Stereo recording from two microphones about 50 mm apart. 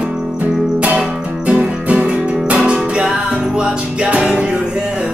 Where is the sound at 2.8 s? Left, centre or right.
Centre.